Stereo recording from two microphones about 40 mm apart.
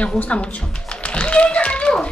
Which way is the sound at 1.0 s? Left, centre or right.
Left.